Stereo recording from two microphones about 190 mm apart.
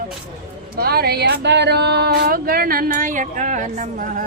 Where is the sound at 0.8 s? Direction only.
55° right (ahead or behind).